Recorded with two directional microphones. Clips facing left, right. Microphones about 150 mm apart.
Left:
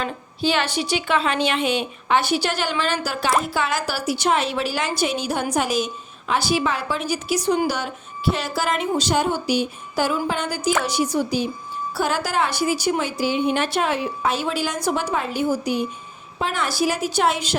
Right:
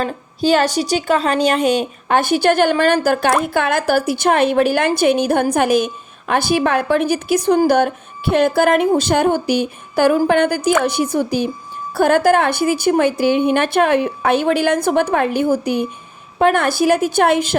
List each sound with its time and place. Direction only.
0.0 s a woman's voice: 40° right (ahead or behind)